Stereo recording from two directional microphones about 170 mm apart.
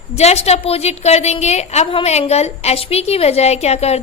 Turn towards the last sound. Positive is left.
turn(degrees=40)  # may be behind; listen again after turning